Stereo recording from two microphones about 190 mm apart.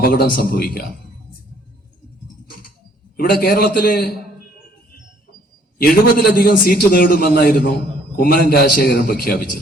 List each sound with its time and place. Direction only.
0.0 s a man's voice: 50° left (ahead or behind)
3.2 s a man's voice: 55° left (ahead or behind)
5.8 s a man's voice: 50° left (ahead or behind)